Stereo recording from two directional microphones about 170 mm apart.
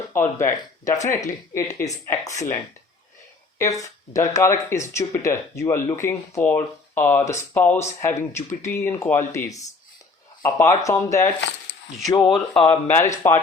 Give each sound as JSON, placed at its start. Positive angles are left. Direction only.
{"t": 0.1, "sound": "speech", "side_deg": 15}
{"t": 3.6, "sound": "speech", "side_deg": 20}
{"t": 12.2, "sound": "speech", "side_deg": 5}